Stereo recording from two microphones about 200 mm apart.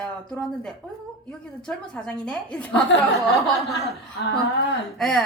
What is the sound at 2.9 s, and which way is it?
Speech, 70° left (ahead or behind).